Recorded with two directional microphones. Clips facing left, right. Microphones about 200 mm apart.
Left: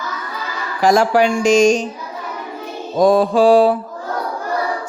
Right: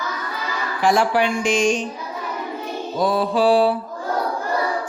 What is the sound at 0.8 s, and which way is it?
Speech, 40° left (ahead or behind).